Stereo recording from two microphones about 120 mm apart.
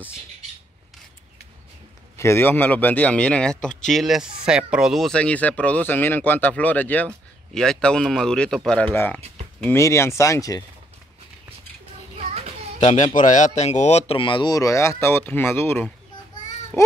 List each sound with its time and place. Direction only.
2.1 s a man's voice: 20° left (ahead or behind)
12.2 s child singing: 60° right (ahead or behind)
12.8 s speech: 90° left; by 14.5 s 45° left (ahead or behind)
14.5 s speech: 25° left (ahead or behind)